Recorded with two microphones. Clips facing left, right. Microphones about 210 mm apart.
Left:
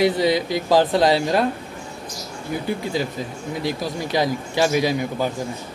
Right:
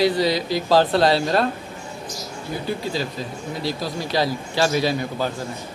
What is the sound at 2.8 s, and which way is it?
A man's voice, 20° left (ahead or behind).